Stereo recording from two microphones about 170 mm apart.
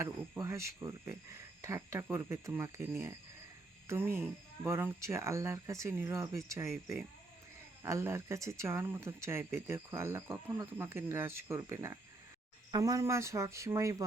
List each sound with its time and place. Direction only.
0.0 s speech: 15° right (ahead or behind)
3.8 s speech: 15° right (ahead or behind)